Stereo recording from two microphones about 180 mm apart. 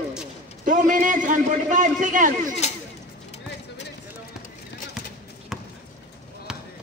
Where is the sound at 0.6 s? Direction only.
45° right (ahead or behind).